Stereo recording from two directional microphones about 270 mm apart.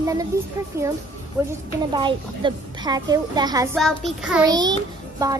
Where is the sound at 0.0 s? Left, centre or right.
Centre.